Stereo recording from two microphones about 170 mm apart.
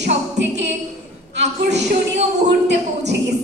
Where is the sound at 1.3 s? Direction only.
90° right.